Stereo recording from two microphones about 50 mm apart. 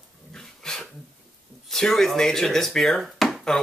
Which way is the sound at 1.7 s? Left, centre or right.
Centre.